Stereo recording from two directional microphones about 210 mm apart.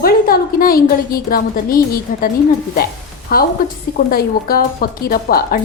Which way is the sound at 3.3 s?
45° left (ahead or behind).